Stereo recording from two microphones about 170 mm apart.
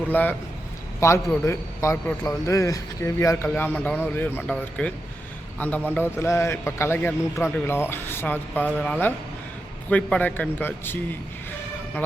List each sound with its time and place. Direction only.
0.1 s a man's voice: 10° left (ahead or behind)